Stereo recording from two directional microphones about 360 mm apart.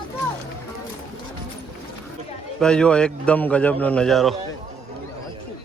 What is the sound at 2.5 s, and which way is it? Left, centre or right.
A man's voice, centre.